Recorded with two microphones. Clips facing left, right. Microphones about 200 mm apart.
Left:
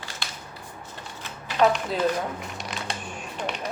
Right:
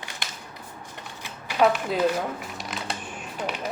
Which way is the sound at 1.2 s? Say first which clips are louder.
Even; 10° right (ahead or behind).